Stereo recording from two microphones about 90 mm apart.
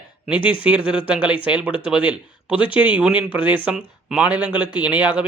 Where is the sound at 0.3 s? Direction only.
70° left (ahead or behind).